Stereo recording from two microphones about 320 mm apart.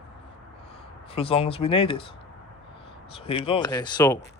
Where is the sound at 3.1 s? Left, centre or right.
Centre.